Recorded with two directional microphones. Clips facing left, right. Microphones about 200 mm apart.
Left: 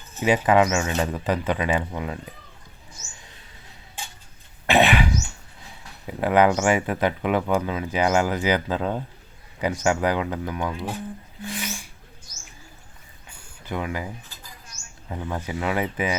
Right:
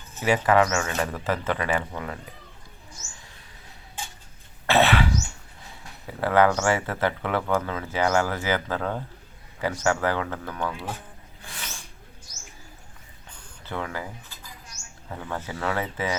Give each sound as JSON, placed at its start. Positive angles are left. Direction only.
{"t": 0.2, "sound": "speech", "side_deg": 20}
{"t": 4.6, "sound": "cough", "side_deg": 15}
{"t": 6.1, "sound": "speech", "side_deg": 15}
{"t": 11.4, "sound": "a sound", "side_deg": 15}
{"t": 13.2, "sound": "a sound", "side_deg": 10}
{"t": 15.1, "sound": "speech", "side_deg": 15}